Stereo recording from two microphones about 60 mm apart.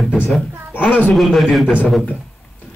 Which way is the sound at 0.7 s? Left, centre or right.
Left.